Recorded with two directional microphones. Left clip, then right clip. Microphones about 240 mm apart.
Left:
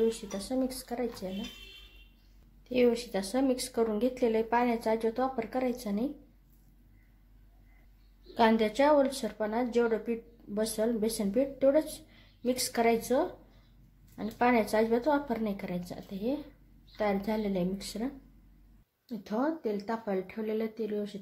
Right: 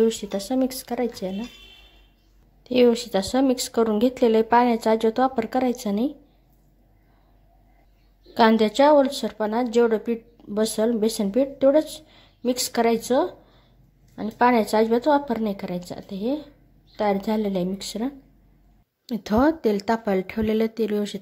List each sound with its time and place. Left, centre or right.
0.1 s speech: right
2.6 s a woman's voice: right
8.4 s a woman's voice: right